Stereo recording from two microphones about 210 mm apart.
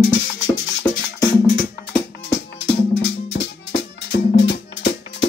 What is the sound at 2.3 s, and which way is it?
Music, 55° left (ahead or behind).